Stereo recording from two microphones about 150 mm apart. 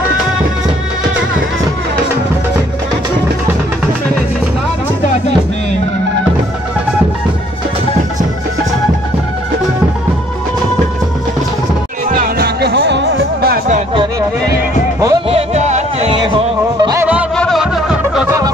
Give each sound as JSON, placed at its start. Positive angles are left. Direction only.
{"t": 12.1, "sound": "music", "side_deg": -80}
{"t": 14.5, "sound": "music", "side_deg": -25}
{"t": 15.2, "sound": "music", "side_deg": -45}
{"t": 16.1, "sound": "music", "side_deg": -35}
{"t": 17.0, "sound": "music", "side_deg": -10}